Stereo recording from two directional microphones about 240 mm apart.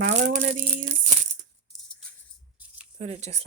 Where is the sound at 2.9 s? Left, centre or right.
Right.